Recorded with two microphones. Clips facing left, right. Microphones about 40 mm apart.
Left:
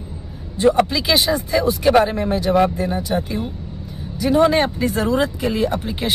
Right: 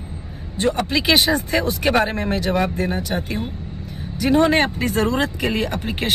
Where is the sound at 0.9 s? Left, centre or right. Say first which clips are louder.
Right 1 dB; right.